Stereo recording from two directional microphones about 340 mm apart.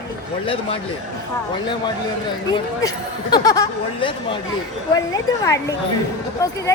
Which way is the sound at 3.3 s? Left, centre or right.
Centre.